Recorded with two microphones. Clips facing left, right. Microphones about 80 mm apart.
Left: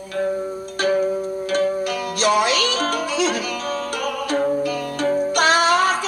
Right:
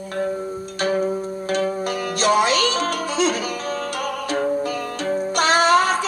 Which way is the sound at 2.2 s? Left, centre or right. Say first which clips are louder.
Right 1 dB; right.